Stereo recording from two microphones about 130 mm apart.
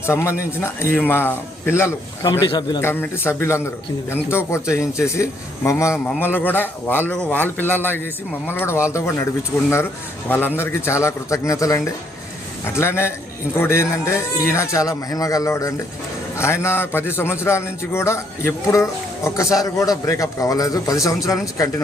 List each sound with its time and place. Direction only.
0.0 s a man's voice: 20° left (ahead or behind)
2.5 s a man's voice: 35° left (ahead or behind)
2.8 s a man's voice: 15° left (ahead or behind)
10.2 s a man's voice: 15° left (ahead or behind)